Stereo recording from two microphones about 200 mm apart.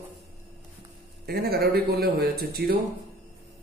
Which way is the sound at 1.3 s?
50° right (ahead or behind).